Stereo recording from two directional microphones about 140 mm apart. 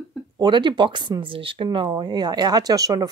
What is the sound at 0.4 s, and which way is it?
Speech, 35° right (ahead or behind).